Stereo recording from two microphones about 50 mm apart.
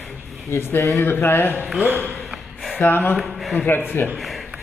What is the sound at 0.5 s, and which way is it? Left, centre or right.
A man's voice, left.